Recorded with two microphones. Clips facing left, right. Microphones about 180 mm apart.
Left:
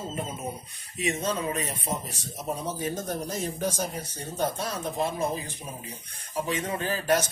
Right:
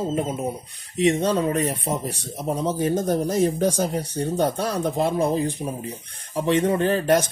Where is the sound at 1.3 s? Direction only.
70° right (ahead or behind).